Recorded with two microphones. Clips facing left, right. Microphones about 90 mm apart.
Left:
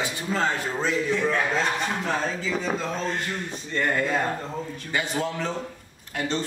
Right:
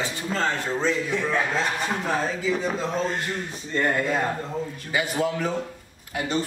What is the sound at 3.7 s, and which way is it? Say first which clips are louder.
Speech: right 2 dB; 15° right (ahead or behind).